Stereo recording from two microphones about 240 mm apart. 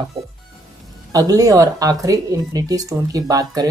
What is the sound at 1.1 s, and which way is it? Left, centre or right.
Speech, centre.